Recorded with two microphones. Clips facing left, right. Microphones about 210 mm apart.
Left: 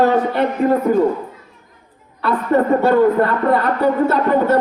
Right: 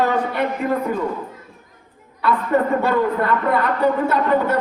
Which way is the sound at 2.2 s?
40° left (ahead or behind).